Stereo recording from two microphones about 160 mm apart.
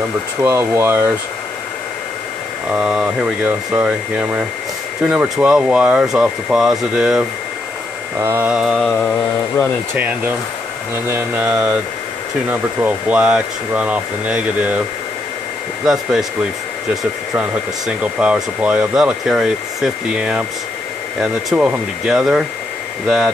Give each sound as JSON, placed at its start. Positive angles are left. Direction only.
{"t": 0.4, "sound": "speech", "side_deg": -15}
{"t": 2.7, "sound": "speech", "side_deg": -5}
{"t": 8.2, "sound": "speech", "side_deg": -15}
{"t": 9.0, "sound": "mantra", "side_deg": 10}
{"t": 9.9, "sound": "speech", "side_deg": -10}
{"t": 15.8, "sound": "speech", "side_deg": 0}
{"t": 17.4, "sound": "speech", "side_deg": -5}